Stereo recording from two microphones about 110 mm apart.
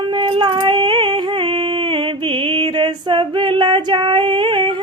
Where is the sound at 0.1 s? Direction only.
50° right (ahead or behind).